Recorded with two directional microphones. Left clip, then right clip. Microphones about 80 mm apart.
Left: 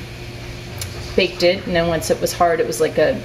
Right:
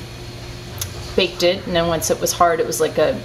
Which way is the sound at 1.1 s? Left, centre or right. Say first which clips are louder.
Left 1 dB; centre.